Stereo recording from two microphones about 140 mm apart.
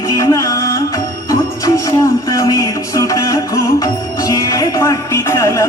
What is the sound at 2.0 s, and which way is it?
Speech, 25° left (ahead or behind).